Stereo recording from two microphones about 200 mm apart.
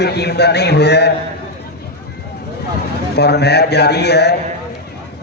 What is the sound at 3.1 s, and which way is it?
A man's voice, 55° left (ahead or behind).